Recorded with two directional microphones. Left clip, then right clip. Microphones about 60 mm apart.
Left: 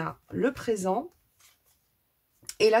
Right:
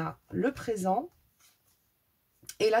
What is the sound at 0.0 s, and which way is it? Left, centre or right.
Speech, left.